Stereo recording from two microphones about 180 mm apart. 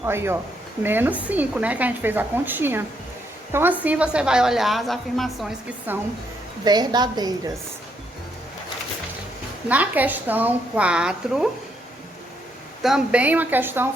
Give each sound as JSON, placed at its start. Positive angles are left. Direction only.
{"t": 0.0, "sound": "a woman's voice", "side_deg": -15}
{"t": 5.9, "sound": "a woman's voice", "side_deg": -10}
{"t": 6.7, "sound": "a woman's voice", "side_deg": -25}
{"t": 9.6, "sound": "a woman's voice", "side_deg": -10}
{"t": 12.8, "sound": "a woman's voice", "side_deg": -5}